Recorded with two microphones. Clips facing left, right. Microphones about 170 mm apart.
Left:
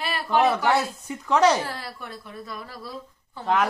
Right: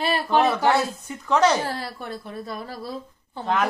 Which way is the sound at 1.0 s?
10° left (ahead or behind).